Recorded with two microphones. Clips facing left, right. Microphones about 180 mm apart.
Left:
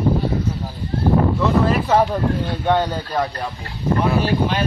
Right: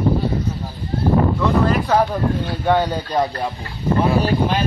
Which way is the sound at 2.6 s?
10° right (ahead or behind).